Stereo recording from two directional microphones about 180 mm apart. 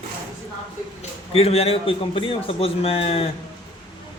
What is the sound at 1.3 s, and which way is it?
A man's voice, 35° left (ahead or behind).